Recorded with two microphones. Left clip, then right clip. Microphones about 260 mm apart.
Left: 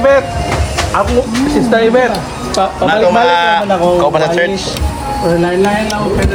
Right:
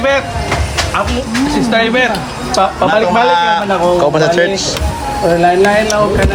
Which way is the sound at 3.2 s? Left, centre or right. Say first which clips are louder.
Left 1 dB; centre.